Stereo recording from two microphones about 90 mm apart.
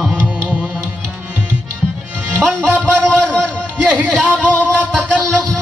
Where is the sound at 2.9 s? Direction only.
10° left (ahead or behind).